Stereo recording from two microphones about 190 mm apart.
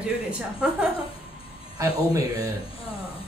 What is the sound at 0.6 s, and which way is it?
Speech, 5° right (ahead or behind).